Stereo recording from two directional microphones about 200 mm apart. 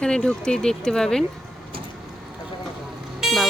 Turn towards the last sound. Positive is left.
turn(degrees=0)  # may be behind; listen again after turning